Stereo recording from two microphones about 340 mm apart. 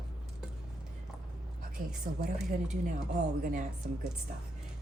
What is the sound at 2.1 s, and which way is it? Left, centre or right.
Speech, right.